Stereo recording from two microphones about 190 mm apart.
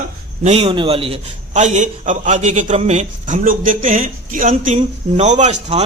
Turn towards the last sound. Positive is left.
turn(degrees=-35)  # may be behind; listen again after turning